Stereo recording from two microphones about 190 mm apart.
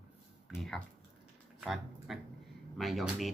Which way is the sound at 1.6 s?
Centre (ahead or behind).